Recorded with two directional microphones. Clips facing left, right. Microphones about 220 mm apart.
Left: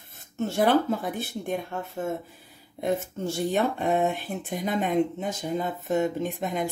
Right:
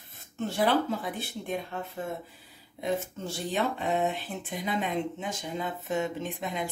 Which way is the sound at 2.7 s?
50° left (ahead or behind).